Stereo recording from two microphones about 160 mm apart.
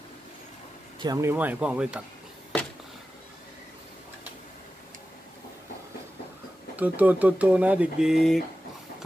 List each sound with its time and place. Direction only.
0.9 s speech: 25° right (ahead or behind)
1.3 s speech: 10° right (ahead or behind)
6.8 s speech: 10° right (ahead or behind)